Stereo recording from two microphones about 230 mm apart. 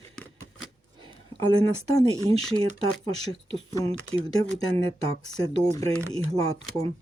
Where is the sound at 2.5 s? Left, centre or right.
Right.